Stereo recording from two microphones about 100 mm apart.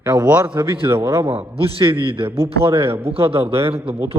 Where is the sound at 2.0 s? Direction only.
60° right (ahead or behind).